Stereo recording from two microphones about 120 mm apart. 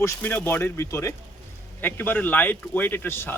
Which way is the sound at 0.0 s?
20° left (ahead or behind).